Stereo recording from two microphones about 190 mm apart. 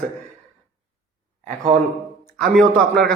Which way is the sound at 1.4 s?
40° right (ahead or behind).